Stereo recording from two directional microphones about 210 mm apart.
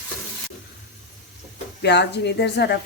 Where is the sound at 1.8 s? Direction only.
55° left (ahead or behind).